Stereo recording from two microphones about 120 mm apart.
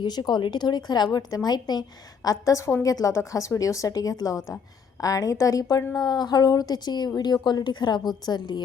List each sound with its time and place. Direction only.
0.0 s a woman's voice: 35° left (ahead or behind)